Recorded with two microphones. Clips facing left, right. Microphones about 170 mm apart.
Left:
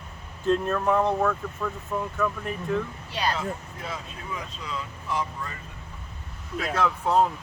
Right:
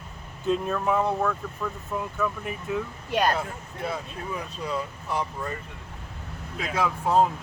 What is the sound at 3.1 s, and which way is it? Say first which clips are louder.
Speech: right 6 dB; 50° right (ahead or behind).